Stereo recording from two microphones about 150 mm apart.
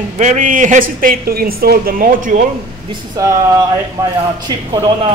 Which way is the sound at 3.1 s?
25° right (ahead or behind).